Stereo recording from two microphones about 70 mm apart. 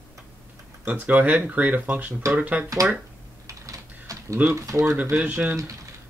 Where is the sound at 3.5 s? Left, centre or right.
Right.